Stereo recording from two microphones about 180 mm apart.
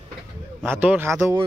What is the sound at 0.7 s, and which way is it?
Speech, 10° right (ahead or behind).